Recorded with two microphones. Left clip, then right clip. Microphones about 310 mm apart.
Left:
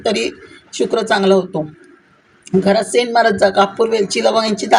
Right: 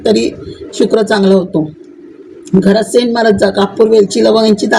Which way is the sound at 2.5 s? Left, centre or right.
Left.